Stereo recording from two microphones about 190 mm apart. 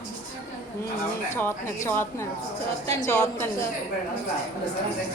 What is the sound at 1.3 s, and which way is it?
A woman's voice, 15° left (ahead or behind).